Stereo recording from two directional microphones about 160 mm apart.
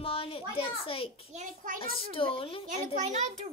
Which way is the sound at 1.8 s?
35° left (ahead or behind).